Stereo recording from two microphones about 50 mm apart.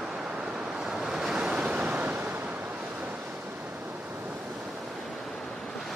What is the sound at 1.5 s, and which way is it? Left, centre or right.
Waves, right.